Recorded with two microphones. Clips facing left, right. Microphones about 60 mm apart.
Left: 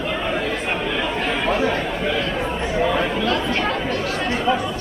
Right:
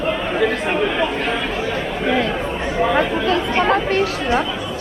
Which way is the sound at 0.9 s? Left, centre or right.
Centre.